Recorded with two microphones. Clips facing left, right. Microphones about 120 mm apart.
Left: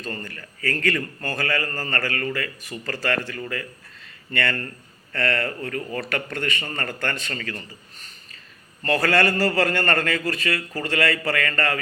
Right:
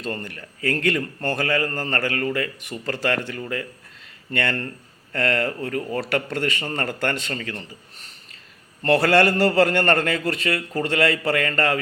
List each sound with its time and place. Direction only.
0.0 s a man's voice: 25° right (ahead or behind)
4.3 s a man's voice: 25° right (ahead or behind)
5.5 s speech: 15° right (ahead or behind)
5.9 s a man's voice: 25° right (ahead or behind)
8.8 s a man's voice: 30° right (ahead or behind)